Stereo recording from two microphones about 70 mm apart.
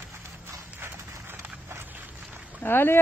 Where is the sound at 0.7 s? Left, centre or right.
Right.